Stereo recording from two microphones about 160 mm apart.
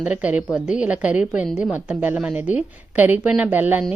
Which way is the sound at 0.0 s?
10° right (ahead or behind).